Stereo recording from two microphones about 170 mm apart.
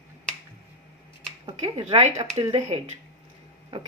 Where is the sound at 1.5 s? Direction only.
30° right (ahead or behind).